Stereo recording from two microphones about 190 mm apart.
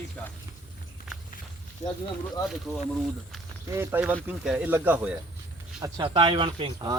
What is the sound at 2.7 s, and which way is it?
Speech, 10° left (ahead or behind).